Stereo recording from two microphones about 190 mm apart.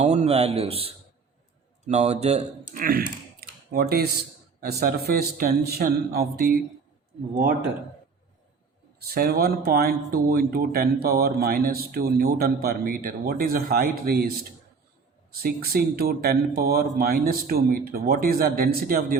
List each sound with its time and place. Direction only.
0.0 s a man's voice: 35° right (ahead or behind); by 6.5 s 55° right (ahead or behind)
9.0 s speech: 55° right (ahead or behind)
15.3 s speech: 55° right (ahead or behind)